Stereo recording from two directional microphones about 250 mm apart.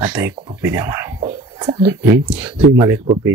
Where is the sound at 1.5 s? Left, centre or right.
Centre.